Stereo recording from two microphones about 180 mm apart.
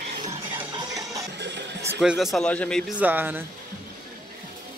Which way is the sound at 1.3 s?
70° right (ahead or behind).